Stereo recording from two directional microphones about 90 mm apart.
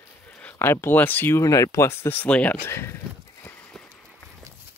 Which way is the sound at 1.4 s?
40° left (ahead or behind).